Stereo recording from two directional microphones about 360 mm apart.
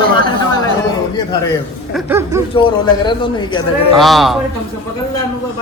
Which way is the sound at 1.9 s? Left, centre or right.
Centre.